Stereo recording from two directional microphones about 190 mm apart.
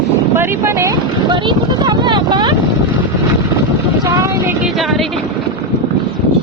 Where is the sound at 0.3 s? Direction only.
15° right (ahead or behind).